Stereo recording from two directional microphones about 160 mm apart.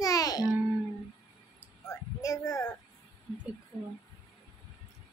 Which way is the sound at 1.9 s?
20° left (ahead or behind).